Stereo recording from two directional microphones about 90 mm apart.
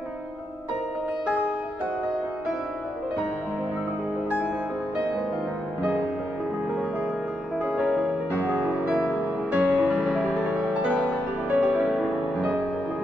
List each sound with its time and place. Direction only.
7.6 s music: 10° right (ahead or behind)
10.2 s music: 15° left (ahead or behind)
10.5 s music: 15° right (ahead or behind)